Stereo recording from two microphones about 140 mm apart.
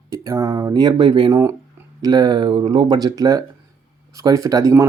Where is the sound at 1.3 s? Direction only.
20° right (ahead or behind).